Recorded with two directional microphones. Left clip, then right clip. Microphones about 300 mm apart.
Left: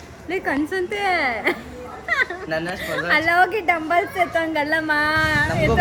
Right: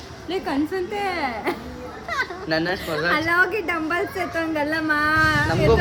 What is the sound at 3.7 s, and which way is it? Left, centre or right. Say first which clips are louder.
Speech: left 4 dB; centre.